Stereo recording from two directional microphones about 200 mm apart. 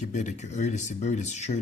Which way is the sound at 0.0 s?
35° left (ahead or behind).